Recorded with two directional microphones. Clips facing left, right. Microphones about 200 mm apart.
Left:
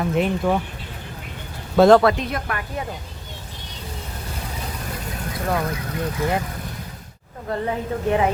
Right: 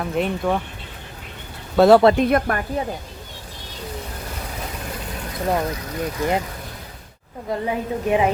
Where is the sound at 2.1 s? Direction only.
50° right (ahead or behind).